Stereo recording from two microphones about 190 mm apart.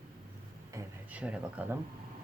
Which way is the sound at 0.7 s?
5° right (ahead or behind).